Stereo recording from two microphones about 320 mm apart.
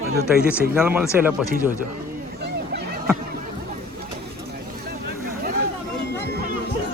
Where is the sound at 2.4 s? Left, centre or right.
Right.